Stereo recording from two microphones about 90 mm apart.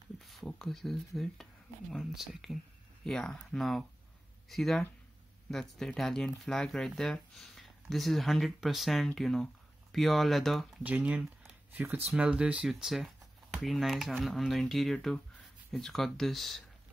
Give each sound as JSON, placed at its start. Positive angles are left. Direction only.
{"t": 0.2, "sound": "speech", "side_deg": 0}
{"t": 10.8, "sound": "speech", "side_deg": -20}